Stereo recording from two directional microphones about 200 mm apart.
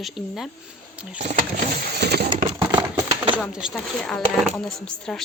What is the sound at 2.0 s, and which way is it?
Coin, 55° right (ahead or behind).